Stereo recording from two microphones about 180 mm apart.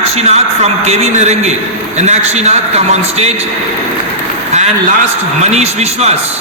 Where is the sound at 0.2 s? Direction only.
35° right (ahead or behind).